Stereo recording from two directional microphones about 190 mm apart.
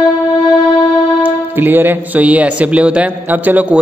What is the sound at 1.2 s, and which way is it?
A man's voice, 10° right (ahead or behind).